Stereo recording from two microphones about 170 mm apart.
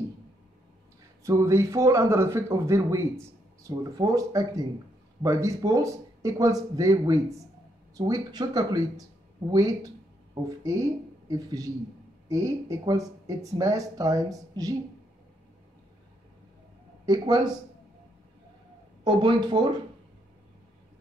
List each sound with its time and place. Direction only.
1.2 s speech: 15° right (ahead or behind)
17.0 s speech: 20° right (ahead or behind)
19.0 s speech: 25° right (ahead or behind)